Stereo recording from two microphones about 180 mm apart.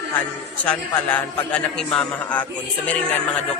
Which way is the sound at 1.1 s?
5° left (ahead or behind).